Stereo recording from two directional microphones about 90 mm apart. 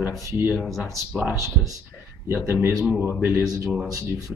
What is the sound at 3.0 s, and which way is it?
Speech, 20° right (ahead or behind).